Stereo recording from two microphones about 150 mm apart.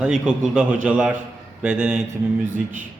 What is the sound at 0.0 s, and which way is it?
Mantra, 10° right (ahead or behind).